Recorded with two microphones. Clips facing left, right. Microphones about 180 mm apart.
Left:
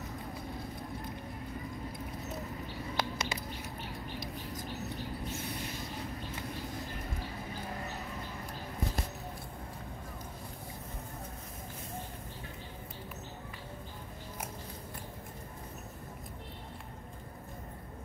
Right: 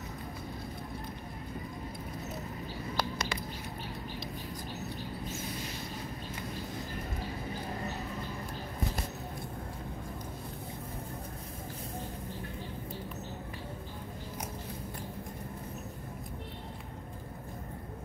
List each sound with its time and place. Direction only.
3.0 s bird: 20° left (ahead or behind)